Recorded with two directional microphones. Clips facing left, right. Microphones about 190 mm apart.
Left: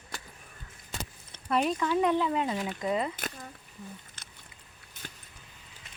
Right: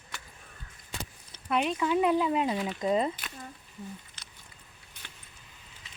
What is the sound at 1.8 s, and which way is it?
Speech, 10° right (ahead or behind).